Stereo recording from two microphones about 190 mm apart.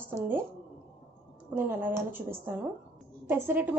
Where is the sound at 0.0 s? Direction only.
10° right (ahead or behind).